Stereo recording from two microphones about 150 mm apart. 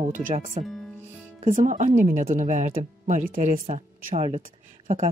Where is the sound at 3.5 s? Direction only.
50° right (ahead or behind).